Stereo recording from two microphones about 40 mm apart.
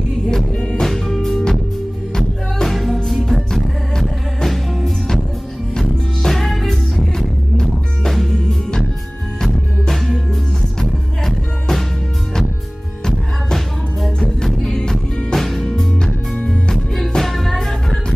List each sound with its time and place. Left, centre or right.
0.3 s music: centre
4.5 s music: centre
14.7 s music: left
15.3 s music: centre